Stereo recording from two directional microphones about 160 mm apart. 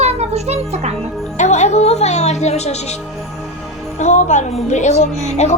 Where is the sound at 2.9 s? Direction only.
Centre (ahead or behind).